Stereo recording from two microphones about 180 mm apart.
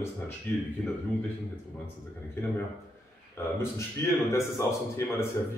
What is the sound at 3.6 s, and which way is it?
A man's voice, 15° left (ahead or behind).